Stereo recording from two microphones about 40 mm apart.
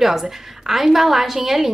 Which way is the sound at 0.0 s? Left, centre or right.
Centre.